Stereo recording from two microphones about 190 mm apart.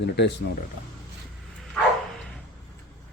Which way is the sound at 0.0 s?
65° left (ahead or behind).